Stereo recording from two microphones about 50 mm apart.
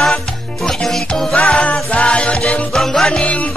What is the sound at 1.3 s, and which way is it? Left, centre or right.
Music, left.